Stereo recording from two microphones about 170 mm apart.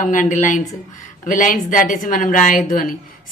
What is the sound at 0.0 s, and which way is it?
A woman's voice, 50° left (ahead or behind).